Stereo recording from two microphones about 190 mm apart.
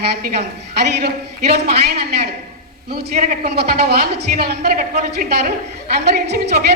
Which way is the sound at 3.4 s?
55° right (ahead or behind).